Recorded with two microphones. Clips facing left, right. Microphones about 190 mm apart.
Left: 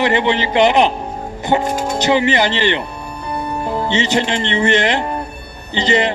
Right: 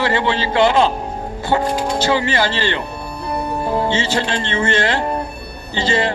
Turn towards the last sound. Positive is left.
turn(degrees=20)  # may be behind; listen again after turning